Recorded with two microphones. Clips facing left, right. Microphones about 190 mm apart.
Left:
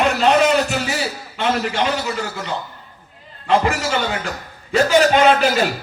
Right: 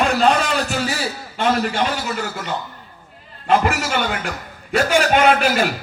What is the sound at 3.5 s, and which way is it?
A man's voice, 55° right (ahead or behind).